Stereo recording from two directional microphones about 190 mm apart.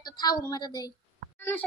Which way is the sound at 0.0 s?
20° left (ahead or behind).